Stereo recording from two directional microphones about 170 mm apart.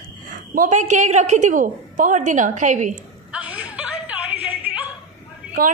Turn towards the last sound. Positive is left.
turn(degrees=-55)  # may be behind; listen again after turning